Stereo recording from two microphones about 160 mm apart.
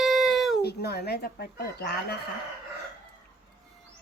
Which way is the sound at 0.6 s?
85° left.